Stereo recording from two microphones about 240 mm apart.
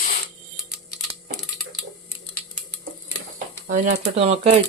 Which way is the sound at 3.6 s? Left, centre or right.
Right.